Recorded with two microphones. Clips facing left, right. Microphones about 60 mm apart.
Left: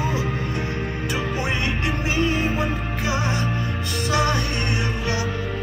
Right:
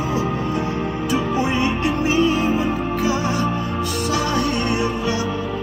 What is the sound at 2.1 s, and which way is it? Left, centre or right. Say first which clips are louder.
Music: right 4 dB; left.